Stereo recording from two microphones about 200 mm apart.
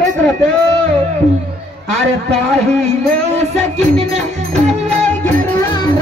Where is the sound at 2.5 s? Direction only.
30° right (ahead or behind).